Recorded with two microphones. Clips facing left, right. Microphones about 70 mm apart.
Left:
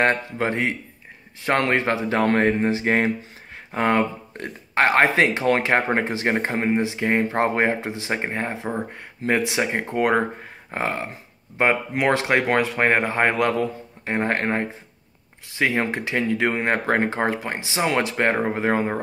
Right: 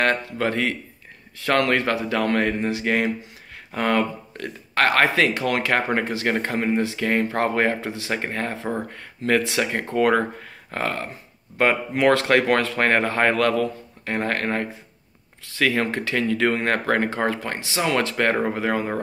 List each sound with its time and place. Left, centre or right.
0.0 s speech: left